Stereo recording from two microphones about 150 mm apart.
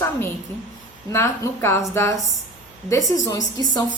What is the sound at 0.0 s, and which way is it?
A woman's voice, 15° left (ahead or behind).